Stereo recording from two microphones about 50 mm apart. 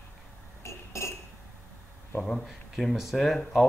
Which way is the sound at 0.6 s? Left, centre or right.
Left.